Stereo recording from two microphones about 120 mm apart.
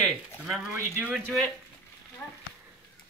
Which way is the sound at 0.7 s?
15° right (ahead or behind).